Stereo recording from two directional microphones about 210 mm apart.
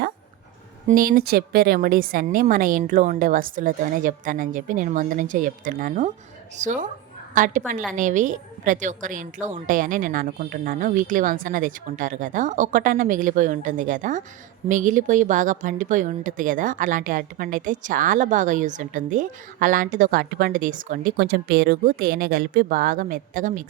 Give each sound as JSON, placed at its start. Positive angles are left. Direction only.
{"t": 0.9, "sound": "a woman's voice", "side_deg": -40}